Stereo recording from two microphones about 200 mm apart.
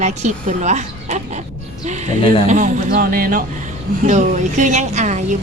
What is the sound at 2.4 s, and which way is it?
Speech, 40° right (ahead or behind).